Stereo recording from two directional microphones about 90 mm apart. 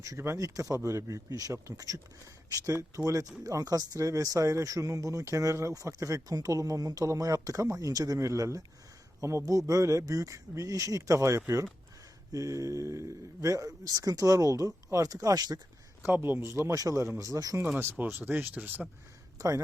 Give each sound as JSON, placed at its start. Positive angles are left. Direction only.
{"t": 0.2, "sound": "speech", "side_deg": -35}
{"t": 16.0, "sound": "speech", "side_deg": -25}
{"t": 17.6, "sound": "speech", "side_deg": -25}
{"t": 19.4, "sound": "speech", "side_deg": -40}